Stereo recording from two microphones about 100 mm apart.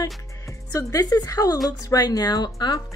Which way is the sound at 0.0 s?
30° left (ahead or behind).